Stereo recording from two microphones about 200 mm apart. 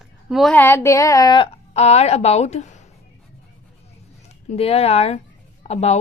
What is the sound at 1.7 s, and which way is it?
A woman's voice, 30° left (ahead or behind).